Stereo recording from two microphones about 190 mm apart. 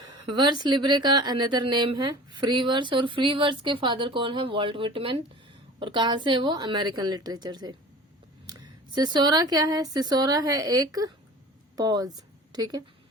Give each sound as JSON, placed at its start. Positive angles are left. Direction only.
{"t": 0.1, "sound": "speech", "side_deg": -25}